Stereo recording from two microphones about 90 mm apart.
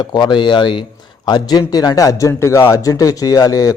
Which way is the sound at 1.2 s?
50° left (ahead or behind).